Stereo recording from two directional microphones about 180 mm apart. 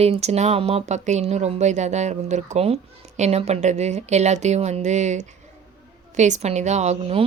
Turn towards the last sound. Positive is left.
turn(degrees=-35)  # may be behind; listen again after turning